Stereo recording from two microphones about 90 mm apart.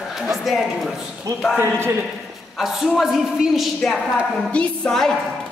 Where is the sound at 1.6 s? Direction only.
25° right (ahead or behind).